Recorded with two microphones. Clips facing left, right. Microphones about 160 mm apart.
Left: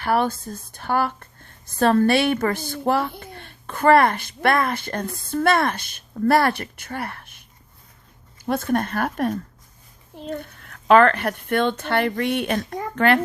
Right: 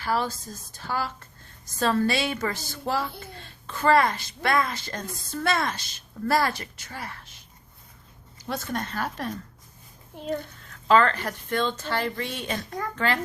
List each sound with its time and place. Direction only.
0.0 s a woman's voice: 60° left (ahead or behind)
8.4 s a woman's voice: 55° left (ahead or behind)
10.6 s a woman's voice: 60° left (ahead or behind)